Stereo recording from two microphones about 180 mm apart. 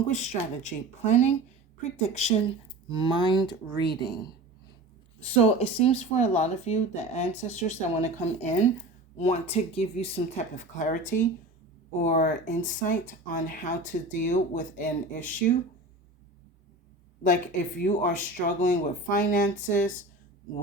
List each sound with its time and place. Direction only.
0.1 s speech: 40° left (ahead or behind)
2.9 s speech: 25° left (ahead or behind)
5.2 s speech: 35° left (ahead or behind)
17.2 s speech: 45° left (ahead or behind)